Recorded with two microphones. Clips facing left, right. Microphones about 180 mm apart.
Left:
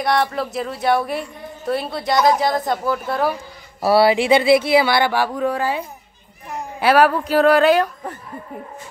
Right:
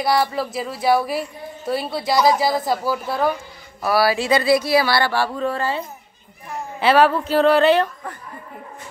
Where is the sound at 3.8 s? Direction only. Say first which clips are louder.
Left 4 dB; 25° left (ahead or behind).